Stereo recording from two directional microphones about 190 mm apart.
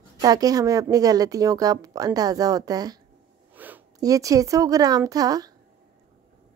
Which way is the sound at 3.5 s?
10° right (ahead or behind).